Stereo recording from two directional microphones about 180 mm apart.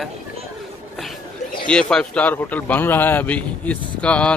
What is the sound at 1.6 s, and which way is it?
Speech, 5° left (ahead or behind).